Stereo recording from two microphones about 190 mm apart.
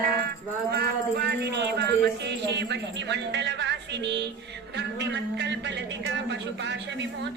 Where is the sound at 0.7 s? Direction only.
60° right (ahead or behind).